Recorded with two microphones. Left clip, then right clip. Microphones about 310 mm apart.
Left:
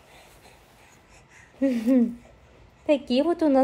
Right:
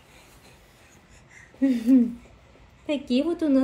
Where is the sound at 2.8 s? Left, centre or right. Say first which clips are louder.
Left 4 dB; left.